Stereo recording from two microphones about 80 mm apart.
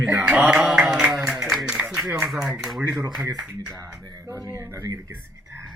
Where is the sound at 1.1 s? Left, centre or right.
Centre.